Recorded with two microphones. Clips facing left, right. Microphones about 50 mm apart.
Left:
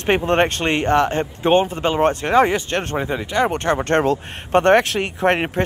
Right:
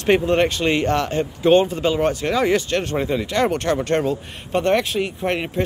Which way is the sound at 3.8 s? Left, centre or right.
Left.